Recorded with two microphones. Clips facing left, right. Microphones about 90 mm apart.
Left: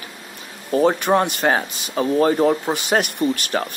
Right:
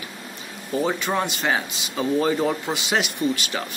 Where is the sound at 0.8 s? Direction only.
55° left (ahead or behind).